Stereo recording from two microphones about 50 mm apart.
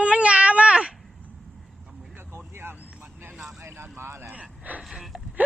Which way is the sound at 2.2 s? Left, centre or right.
Right.